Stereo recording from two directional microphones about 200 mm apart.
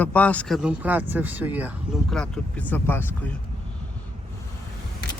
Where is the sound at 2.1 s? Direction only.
5° left (ahead or behind).